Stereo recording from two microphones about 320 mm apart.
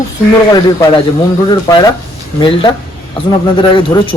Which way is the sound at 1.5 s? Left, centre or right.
Centre.